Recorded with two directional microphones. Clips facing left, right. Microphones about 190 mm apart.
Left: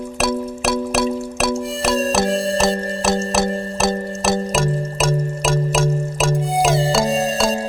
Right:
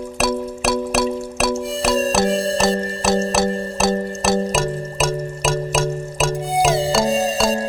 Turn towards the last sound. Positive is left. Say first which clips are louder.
# even
turn(degrees=0)  # may be behind; listen again after turning